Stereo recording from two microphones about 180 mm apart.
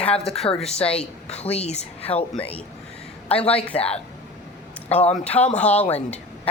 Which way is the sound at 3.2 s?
35° left (ahead or behind).